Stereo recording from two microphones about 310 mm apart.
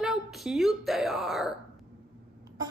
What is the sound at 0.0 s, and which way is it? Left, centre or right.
A woman's voice, centre.